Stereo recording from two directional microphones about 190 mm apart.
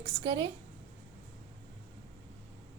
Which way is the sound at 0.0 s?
30° right (ahead or behind).